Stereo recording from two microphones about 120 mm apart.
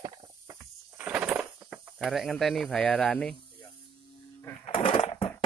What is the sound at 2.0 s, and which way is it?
Speech, centre (ahead or behind).